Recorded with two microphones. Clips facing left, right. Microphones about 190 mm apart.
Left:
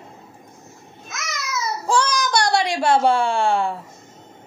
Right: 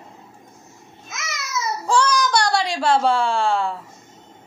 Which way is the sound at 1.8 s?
20° left (ahead or behind).